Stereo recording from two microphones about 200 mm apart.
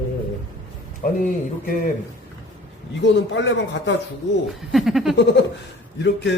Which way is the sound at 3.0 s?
65° left (ahead or behind).